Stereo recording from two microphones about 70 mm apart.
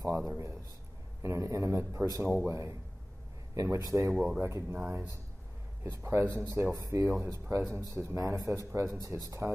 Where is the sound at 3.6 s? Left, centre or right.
Right.